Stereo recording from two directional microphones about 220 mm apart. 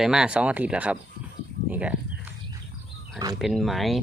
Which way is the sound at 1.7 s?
5° right (ahead or behind).